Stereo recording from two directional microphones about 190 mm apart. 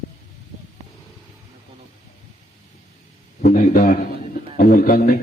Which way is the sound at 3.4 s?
45° left (ahead or behind).